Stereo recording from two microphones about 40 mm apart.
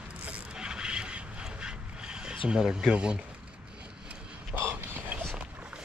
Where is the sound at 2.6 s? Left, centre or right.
Centre.